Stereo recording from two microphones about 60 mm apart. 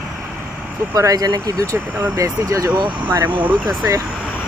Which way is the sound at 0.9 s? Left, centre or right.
Right.